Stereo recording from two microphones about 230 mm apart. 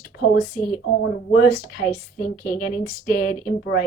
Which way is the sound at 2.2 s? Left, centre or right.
Left.